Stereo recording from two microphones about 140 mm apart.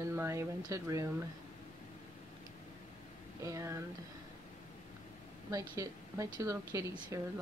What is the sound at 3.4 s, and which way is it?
Speech, 20° right (ahead or behind).